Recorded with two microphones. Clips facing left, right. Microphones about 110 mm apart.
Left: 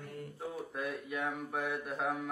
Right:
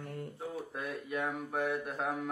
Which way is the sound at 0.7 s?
Centre (ahead or behind).